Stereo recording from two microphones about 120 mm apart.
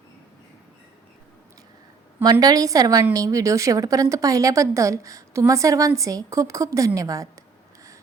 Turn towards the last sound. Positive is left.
turn(degrees=-30)  # may be behind; listen again after turning